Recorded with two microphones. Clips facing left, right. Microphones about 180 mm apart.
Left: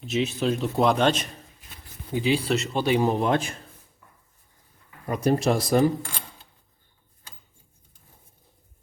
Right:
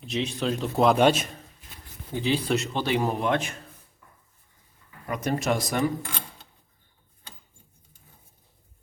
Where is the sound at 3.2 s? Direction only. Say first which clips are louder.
Left 2 dB; 35° left (ahead or behind).